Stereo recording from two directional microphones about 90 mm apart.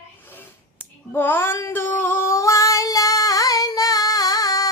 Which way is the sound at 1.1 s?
25° left (ahead or behind).